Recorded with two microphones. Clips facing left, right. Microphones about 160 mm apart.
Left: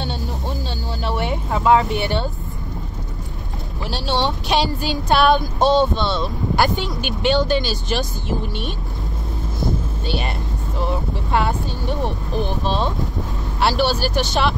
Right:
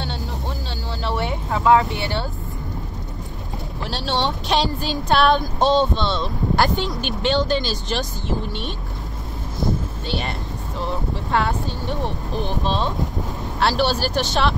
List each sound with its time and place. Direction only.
1.0 s a sound: 15° left (ahead or behind)
3.9 s speech: 5° left (ahead or behind)
10.0 s speech: 10° left (ahead or behind)
12.6 s speech: 15° left (ahead or behind)